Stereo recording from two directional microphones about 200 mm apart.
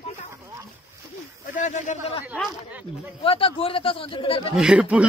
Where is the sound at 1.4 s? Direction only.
40° left (ahead or behind).